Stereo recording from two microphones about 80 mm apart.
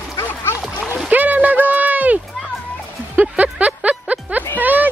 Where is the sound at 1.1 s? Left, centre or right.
Centre.